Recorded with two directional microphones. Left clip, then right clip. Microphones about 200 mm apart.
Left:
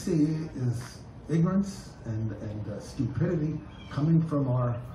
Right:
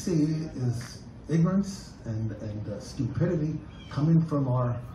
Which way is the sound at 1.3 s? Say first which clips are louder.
Right 1 dB; centre (ahead or behind).